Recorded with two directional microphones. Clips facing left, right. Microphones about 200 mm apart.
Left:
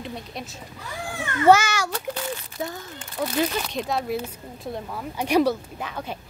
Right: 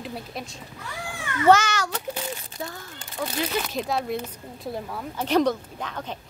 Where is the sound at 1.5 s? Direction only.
10° left (ahead or behind).